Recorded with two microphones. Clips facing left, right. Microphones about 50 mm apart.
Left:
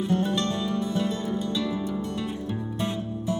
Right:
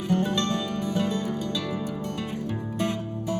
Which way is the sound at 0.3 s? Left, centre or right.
Right.